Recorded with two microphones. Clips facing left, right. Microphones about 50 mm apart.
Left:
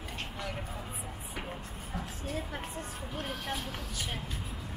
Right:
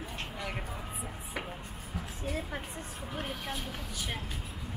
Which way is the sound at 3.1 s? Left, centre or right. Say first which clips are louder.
Right 1 dB; centre.